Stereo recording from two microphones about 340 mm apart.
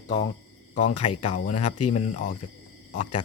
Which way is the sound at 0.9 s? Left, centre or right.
Left.